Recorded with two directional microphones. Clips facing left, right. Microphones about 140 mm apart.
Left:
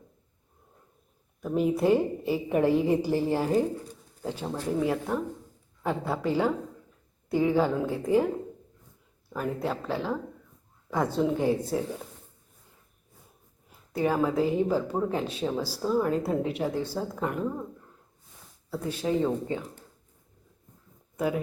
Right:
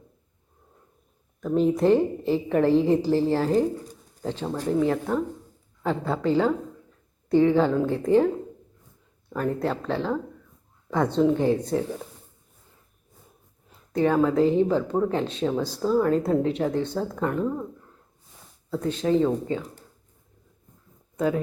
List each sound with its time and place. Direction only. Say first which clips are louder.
1.4 s speech: right 4 dB; 10° left (ahead or behind)
4.4 s speech: right 4 dB; 15° right (ahead or behind)
4.8 s speech: right 4 dB; 10° left (ahead or behind)
9.3 s speech: right 4 dB; 5° left (ahead or behind)
13.9 s speech: right 5 dB; 10° left (ahead or behind)
18.7 s speech: right 5 dB; 10° left (ahead or behind)
21.2 s speech: right 4 dB; 10° left (ahead or behind)